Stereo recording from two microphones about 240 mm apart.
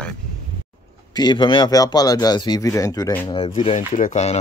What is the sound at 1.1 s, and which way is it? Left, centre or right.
Speech, centre.